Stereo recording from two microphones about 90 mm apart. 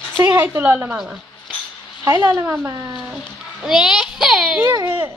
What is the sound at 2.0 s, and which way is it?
Speech, 30° right (ahead or behind).